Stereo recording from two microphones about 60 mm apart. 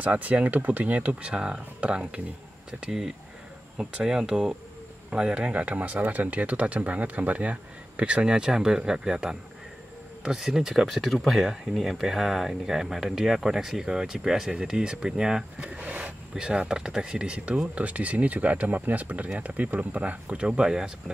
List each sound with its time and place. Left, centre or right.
0.0 s speech: right
2.8 s speech: centre